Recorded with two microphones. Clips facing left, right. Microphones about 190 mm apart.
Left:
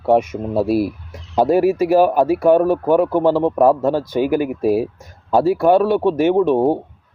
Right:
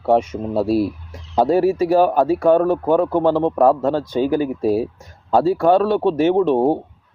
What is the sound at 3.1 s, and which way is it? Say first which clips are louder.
Speech: left 1 dB; 15° right (ahead or behind).